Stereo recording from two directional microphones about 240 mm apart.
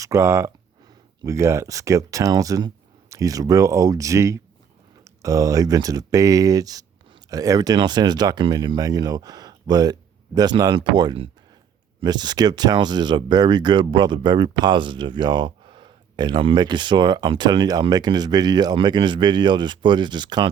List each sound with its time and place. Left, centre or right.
0.0 s speech: centre